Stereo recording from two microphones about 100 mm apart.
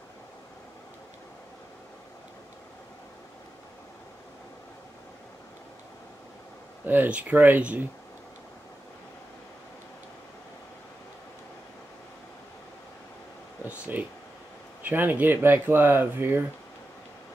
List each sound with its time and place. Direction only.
6.9 s speech: 15° right (ahead or behind)
13.7 s a sound: 20° right (ahead or behind)
14.8 s speech: 20° right (ahead or behind)